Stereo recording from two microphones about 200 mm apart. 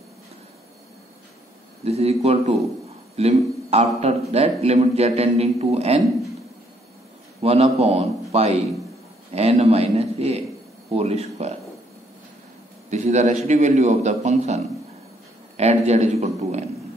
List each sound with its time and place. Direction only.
1.9 s a man's voice: 30° right (ahead or behind)
7.4 s a man's voice: 30° right (ahead or behind)
12.9 s a man's voice: 35° right (ahead or behind)